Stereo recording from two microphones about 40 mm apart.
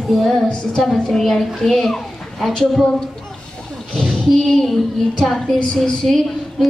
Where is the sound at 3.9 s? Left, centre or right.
Centre.